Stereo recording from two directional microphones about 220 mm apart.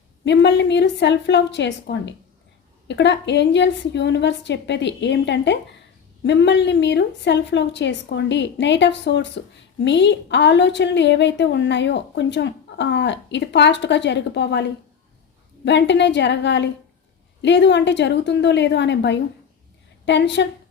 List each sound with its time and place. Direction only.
0.3 s a woman's voice: 50° left (ahead or behind)